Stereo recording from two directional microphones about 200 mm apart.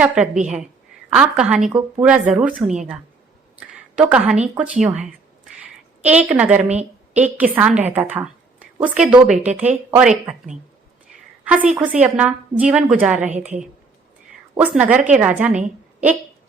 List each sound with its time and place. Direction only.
0.0 s a woman's voice: 5° right (ahead or behind)
6.0 s a woman's voice: 5° right (ahead or behind)
13.3 s a woman's voice: 35° right (ahead or behind)
14.6 s a woman's voice: 5° right (ahead or behind)